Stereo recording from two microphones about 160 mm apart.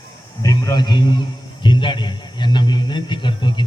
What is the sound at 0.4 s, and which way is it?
A man's voice, 20° left (ahead or behind).